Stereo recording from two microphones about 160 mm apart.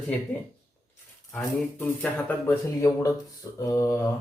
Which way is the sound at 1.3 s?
10° left (ahead or behind).